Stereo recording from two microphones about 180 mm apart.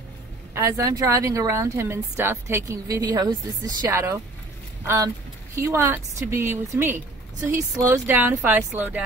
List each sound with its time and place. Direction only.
0.6 s speech: 15° right (ahead or behind)